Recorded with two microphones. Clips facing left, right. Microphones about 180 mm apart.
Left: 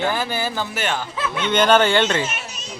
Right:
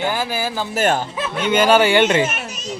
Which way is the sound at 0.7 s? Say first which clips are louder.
Right 7 dB; 45° right (ahead or behind).